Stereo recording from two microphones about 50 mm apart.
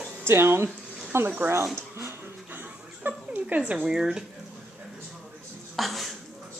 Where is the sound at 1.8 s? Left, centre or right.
Right.